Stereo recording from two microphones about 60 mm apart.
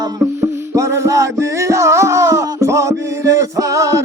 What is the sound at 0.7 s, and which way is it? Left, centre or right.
Music, right.